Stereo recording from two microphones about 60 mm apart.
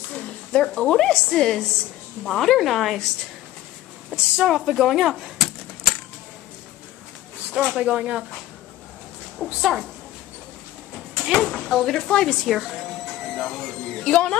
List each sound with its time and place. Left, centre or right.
0.1 s a woman's voice: centre
4.5 s speech: centre
7.5 s speech: centre
9.4 s a woman's voice: centre
11.2 s a woman's voice: centre
12.4 s speech: centre
13.2 s a sound: centre